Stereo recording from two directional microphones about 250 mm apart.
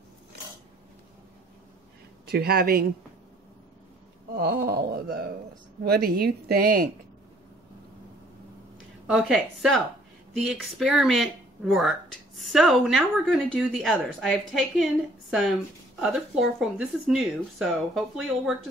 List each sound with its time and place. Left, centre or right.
2.2 s speech: right
4.4 s speech: right
9.0 s speech: centre